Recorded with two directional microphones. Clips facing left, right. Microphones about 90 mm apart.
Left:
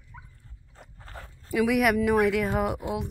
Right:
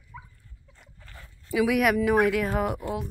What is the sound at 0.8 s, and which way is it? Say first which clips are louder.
Dog: left 6 dB; 40° left (ahead or behind).